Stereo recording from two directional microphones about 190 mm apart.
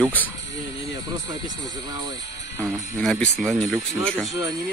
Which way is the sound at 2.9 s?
5° left (ahead or behind).